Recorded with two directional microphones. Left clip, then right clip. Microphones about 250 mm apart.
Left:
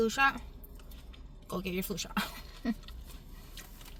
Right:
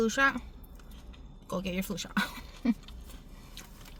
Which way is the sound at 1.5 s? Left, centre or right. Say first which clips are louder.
Right 2 dB; centre.